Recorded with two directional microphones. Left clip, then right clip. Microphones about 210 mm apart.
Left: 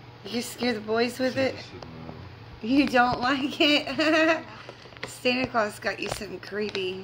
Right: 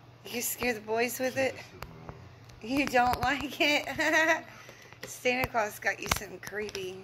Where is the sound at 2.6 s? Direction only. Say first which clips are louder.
Left 5 dB; 25° left (ahead or behind).